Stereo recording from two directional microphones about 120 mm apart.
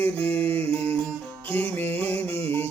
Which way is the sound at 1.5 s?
15° left (ahead or behind).